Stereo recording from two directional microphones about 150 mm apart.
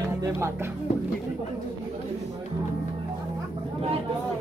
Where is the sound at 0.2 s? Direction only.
20° right (ahead or behind).